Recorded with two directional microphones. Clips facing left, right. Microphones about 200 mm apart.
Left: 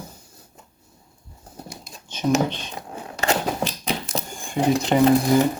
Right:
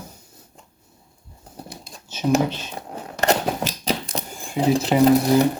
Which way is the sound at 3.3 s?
40° right (ahead or behind).